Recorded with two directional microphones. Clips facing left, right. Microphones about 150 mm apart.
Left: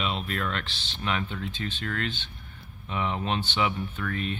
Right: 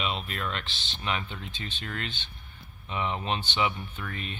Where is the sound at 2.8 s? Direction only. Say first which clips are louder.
Left 1 dB; centre (ahead or behind).